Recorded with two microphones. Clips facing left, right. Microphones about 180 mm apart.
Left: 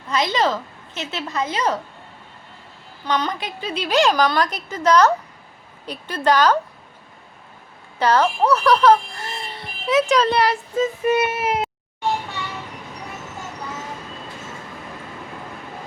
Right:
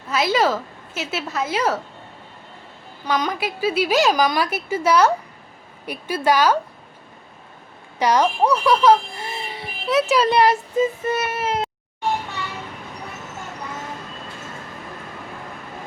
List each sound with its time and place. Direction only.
0.1 s a woman's voice: 5° right (ahead or behind)
3.1 s a woman's voice: 10° right (ahead or behind)
7.9 s a woman's voice: 15° right (ahead or behind)
11.0 s speech: 15° left (ahead or behind)